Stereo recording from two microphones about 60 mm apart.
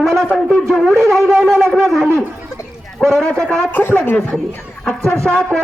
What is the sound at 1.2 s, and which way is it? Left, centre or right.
Shofar, right.